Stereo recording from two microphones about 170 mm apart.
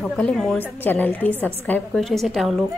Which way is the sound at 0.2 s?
5° left (ahead or behind).